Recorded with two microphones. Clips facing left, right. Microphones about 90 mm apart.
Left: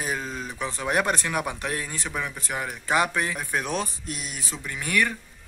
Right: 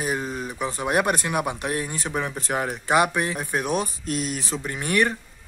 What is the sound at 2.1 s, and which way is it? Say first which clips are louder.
Speech: right 5 dB; 35° right (ahead or behind).